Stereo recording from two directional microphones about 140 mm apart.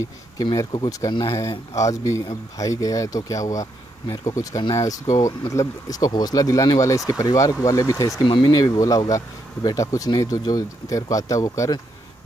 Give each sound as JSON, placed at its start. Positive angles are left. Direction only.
{"t": 0.4, "sound": "speech", "side_deg": 30}
{"t": 8.2, "sound": "speech", "side_deg": 35}